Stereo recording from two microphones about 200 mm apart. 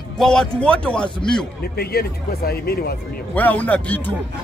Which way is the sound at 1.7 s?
50° left (ahead or behind).